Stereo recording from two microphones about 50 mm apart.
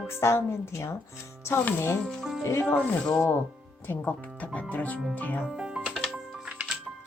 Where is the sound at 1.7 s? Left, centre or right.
Left.